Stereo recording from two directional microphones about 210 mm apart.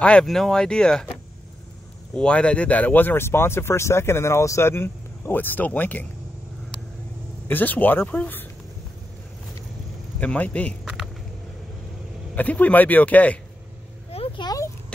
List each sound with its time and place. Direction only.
0.0 s speech: 5° left (ahead or behind)
2.1 s speech: 5° left (ahead or behind)
7.4 s speech: 10° left (ahead or behind)
10.2 s speech: 5° left (ahead or behind)
12.4 s speech: 5° left (ahead or behind)
14.1 s a sound: 25° left (ahead or behind)